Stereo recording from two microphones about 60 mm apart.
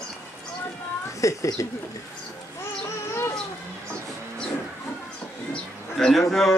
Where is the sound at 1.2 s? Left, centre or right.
Left.